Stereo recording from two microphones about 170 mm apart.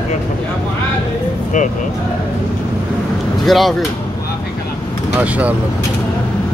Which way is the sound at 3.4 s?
Centre (ahead or behind).